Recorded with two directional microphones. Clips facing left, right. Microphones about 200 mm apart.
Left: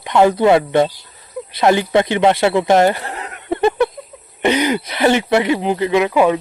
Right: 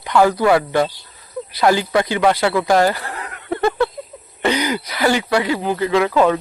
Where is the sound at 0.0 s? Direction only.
20° left (ahead or behind).